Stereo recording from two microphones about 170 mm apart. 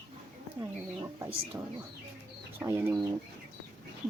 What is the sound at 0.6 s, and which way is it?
Speech, 15° right (ahead or behind).